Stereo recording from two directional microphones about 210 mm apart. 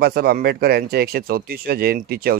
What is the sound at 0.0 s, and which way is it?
Speech, 45° right (ahead or behind).